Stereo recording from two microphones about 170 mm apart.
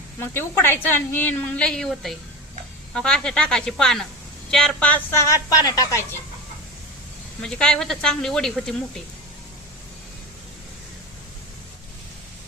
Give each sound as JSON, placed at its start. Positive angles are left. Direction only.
{"t": 0.2, "sound": "a woman's voice", "side_deg": 15}
{"t": 7.4, "sound": "speech", "side_deg": 5}